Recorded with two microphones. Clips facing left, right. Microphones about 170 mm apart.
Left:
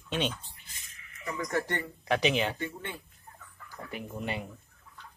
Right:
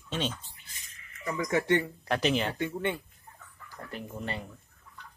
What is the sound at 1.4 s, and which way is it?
Speech, 75° right (ahead or behind).